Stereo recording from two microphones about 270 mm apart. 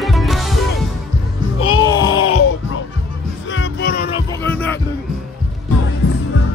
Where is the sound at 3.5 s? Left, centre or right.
Left.